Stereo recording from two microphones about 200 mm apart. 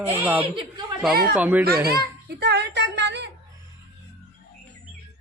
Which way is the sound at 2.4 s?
55° right (ahead or behind).